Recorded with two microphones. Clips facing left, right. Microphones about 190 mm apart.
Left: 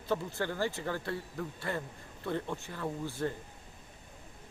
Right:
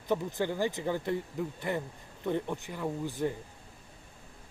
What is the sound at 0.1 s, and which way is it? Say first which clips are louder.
Speech: right 3 dB; 15° right (ahead or behind).